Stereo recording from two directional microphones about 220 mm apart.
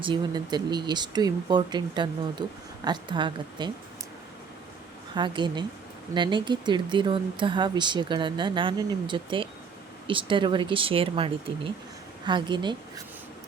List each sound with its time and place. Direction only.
0.0 s speech: 20° right (ahead or behind)
5.1 s speech: 20° right (ahead or behind)